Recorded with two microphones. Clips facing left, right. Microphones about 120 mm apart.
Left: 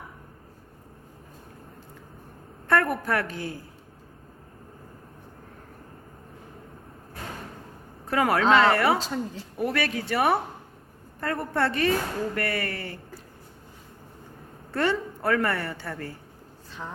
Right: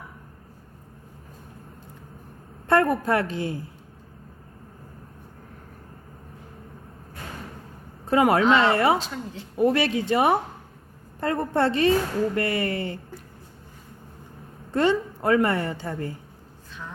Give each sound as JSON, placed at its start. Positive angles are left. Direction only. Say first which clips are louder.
{"t": 2.6, "sound": "a woman's voice", "louder": "right 4 dB", "side_deg": -25}
{"t": 8.0, "sound": "a woman's voice", "louder": "right 3 dB", "side_deg": -25}
{"t": 9.0, "sound": "a woman's voice", "louder": "left 2 dB", "side_deg": 40}
{"t": 9.6, "sound": "a woman's voice", "louder": "right 6 dB", "side_deg": -25}
{"t": 14.7, "sound": "a woman's voice", "louder": "right 4 dB", "side_deg": -20}